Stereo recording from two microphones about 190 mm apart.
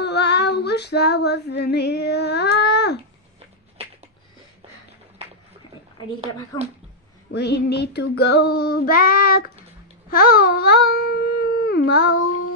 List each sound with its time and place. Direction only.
0.0 s child singing: 60° left (ahead or behind)
7.3 s child singing: 60° left (ahead or behind)
10.0 s a sound: 50° left (ahead or behind)